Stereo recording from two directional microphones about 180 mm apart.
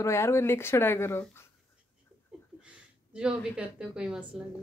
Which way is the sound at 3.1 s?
5° right (ahead or behind).